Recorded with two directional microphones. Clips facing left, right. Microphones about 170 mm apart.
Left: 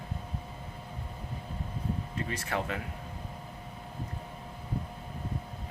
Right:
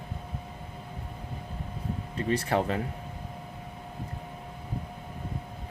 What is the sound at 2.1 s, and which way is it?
Speech, 35° right (ahead or behind).